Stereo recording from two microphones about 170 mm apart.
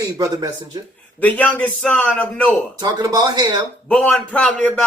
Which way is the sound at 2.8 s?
25° right (ahead or behind).